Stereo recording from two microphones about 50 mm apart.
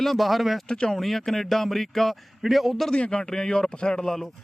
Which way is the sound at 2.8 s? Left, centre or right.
Centre.